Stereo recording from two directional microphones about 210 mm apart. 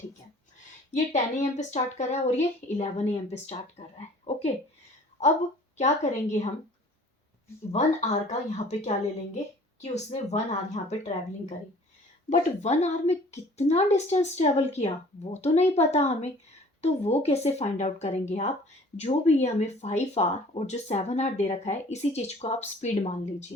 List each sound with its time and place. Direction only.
0.9 s speech: 35° left (ahead or behind)
5.7 s speech: 35° left (ahead or behind)
7.7 s speech: 35° left (ahead or behind)